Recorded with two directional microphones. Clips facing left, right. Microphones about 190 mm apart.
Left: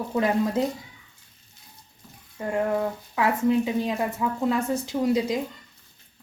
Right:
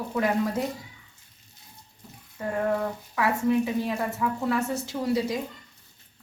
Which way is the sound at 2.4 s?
15° left (ahead or behind).